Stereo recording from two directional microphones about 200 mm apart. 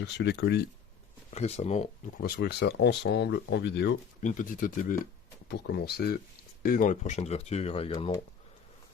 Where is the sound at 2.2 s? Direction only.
55° left (ahead or behind).